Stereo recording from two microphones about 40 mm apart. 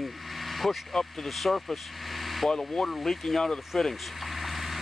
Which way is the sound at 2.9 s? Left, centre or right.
Centre.